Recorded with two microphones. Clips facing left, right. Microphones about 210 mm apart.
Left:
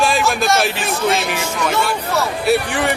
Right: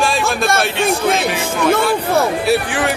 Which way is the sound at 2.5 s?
Centre (ahead or behind).